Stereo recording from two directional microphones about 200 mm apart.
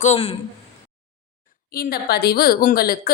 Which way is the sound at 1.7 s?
50° left (ahead or behind).